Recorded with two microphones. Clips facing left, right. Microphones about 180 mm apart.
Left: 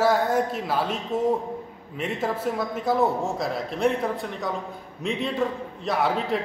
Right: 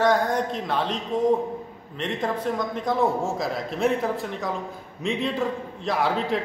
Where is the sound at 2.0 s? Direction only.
5° left (ahead or behind).